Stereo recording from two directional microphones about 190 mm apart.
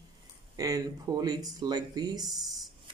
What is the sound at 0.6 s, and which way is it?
Speech, 20° right (ahead or behind).